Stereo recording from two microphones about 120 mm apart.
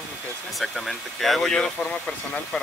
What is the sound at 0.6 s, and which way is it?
Speech, centre (ahead or behind).